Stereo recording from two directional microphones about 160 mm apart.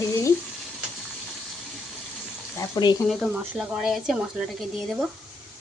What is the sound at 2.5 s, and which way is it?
Speech, 25° left (ahead or behind).